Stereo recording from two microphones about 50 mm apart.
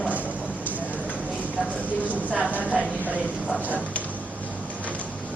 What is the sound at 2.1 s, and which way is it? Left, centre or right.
Speech, right.